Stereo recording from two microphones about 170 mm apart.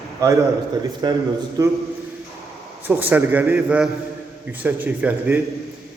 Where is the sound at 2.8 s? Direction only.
10° right (ahead or behind).